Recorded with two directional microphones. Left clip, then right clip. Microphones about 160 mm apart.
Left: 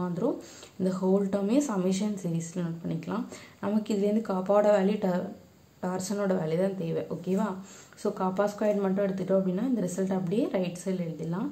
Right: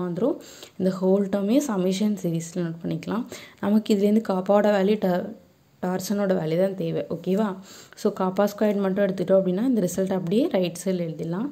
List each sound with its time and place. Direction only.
0.2 s speech: 35° right (ahead or behind)